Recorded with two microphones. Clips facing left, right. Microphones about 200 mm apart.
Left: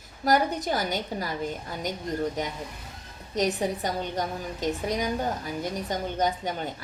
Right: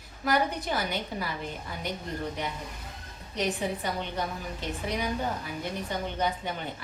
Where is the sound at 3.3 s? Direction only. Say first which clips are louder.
Left 4 dB; 40° left (ahead or behind).